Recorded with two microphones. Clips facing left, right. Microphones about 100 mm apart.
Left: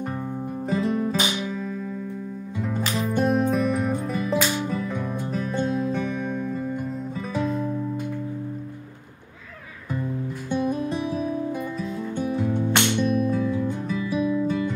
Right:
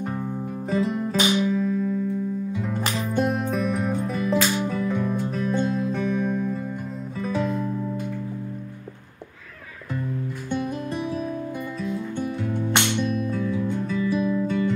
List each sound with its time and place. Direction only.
0.7 s music: centre (ahead or behind)
10.9 s music: 15° left (ahead or behind)